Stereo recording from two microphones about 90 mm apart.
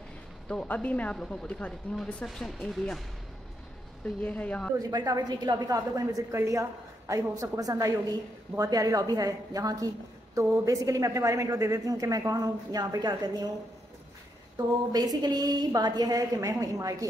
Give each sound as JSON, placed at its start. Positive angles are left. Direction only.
{"t": 0.5, "sound": "speech", "side_deg": 10}
{"t": 4.0, "sound": "speech", "side_deg": 15}
{"t": 4.7, "sound": "a woman's voice", "side_deg": -45}
{"t": 14.9, "sound": "a woman's voice", "side_deg": -50}